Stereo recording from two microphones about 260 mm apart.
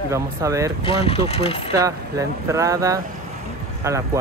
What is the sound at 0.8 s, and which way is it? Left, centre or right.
Speech, left.